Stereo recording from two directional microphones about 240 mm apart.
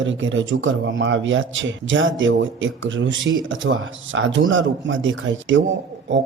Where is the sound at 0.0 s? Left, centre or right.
Right.